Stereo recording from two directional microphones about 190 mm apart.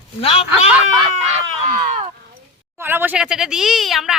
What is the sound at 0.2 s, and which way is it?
Speech, 30° left (ahead or behind).